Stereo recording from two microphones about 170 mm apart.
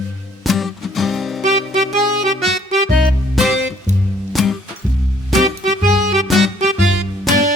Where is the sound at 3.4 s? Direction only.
Centre (ahead or behind).